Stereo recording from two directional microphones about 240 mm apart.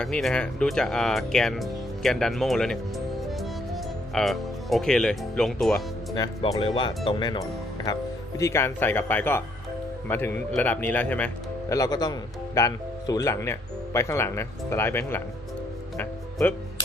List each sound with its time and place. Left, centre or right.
0.0 s speech: centre
3.2 s music: centre
6.1 s speech: centre
16.0 s music: centre